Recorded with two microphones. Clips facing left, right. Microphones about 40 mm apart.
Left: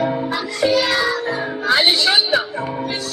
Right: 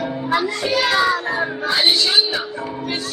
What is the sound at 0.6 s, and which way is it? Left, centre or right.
Music, centre.